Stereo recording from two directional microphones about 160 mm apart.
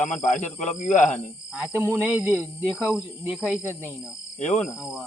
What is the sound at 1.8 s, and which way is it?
Speech, 10° right (ahead or behind).